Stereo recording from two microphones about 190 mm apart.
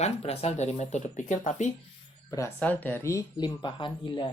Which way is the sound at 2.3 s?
10° left (ahead or behind).